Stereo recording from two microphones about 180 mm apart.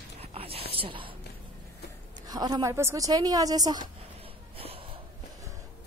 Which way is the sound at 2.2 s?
20° right (ahead or behind).